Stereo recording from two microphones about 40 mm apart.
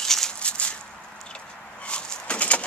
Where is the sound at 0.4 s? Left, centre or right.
Left.